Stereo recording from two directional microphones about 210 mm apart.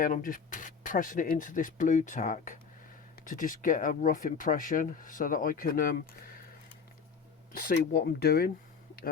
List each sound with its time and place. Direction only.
0.0 s speech: 40° left (ahead or behind)
7.5 s speech: 45° left (ahead or behind)